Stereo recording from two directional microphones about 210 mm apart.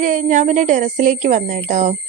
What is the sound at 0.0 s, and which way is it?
A woman's voice, 40° right (ahead or behind).